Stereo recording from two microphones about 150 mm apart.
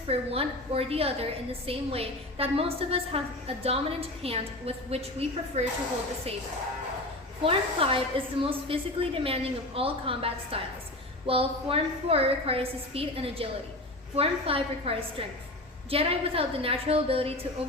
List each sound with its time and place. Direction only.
0.1 s a woman's voice: 40° right (ahead or behind)
7.4 s a woman's voice: 40° right (ahead or behind)